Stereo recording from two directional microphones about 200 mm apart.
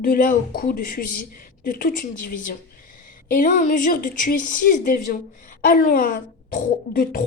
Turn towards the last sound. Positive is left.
turn(degrees=45)  # may be behind; listen again after turning